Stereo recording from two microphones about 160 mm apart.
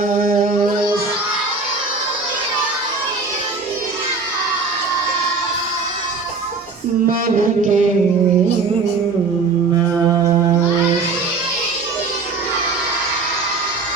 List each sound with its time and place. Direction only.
0.2 s music: 60° right (ahead or behind)
7.1 s music: 55° right (ahead or behind)
10.1 s mantra: 20° right (ahead or behind)